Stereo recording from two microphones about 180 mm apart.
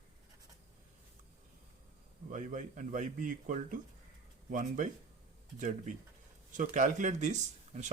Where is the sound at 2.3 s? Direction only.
45° right (ahead or behind).